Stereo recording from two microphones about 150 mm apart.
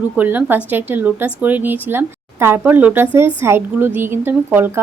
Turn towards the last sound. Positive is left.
turn(degrees=-15)  # may be behind; listen again after turning